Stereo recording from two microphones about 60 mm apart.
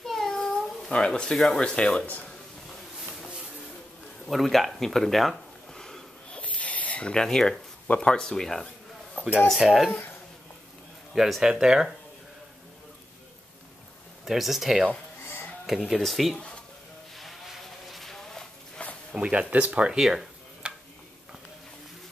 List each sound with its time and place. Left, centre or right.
0.0 s cat: centre
1.6 s speech: centre
4.3 s a sound: centre
6.4 s a sound: left
7.9 s speech: centre
9.2 s a sound: left
9.6 s speech: centre
9.8 s speech: left
11.1 s speech: centre
14.2 s speech: centre
17.2 s vehicle: centre
18.8 s a sound: centre
19.1 s speech: right
20.0 s speech: centre